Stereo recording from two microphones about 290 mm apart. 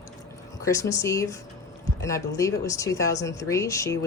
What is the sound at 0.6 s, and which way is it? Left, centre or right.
A woman's voice, centre.